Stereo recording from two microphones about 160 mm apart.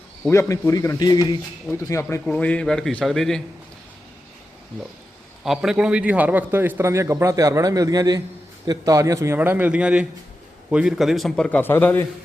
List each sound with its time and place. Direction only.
0.3 s speech: 20° left (ahead or behind)
2.2 s a man's voice: 5° left (ahead or behind)
5.4 s a man's voice: 5° right (ahead or behind)